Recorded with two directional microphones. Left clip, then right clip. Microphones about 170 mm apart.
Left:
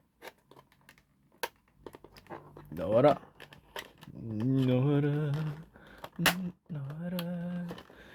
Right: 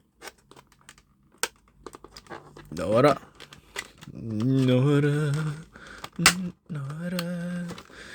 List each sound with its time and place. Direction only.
1.9 s pant: 10° right (ahead or behind)